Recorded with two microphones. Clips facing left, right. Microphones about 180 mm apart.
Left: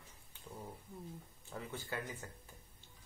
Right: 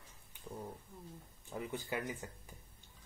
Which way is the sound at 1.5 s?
15° right (ahead or behind).